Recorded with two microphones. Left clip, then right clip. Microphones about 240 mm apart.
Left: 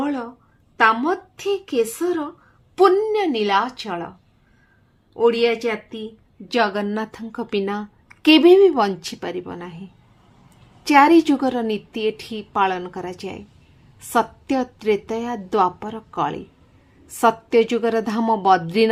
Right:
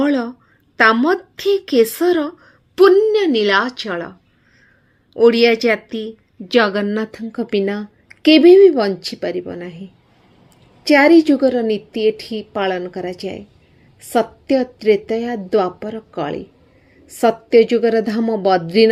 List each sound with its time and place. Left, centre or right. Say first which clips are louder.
0.0 s a woman's voice: right 7 dB; right
5.1 s a woman's voice: right 6 dB; centre
10.8 s a woman's voice: right 3 dB; centre